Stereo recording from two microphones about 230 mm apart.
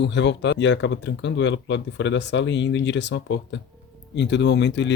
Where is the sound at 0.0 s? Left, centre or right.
Left.